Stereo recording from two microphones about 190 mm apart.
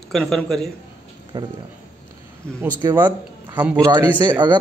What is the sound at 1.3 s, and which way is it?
Speech, 20° right (ahead or behind).